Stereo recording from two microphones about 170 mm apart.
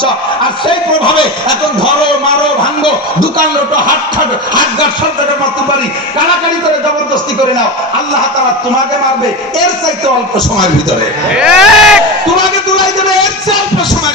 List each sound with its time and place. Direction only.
11.3 s speech: 5° right (ahead or behind)